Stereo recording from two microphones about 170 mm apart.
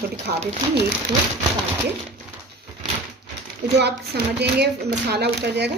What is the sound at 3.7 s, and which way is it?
Speech, 80° right.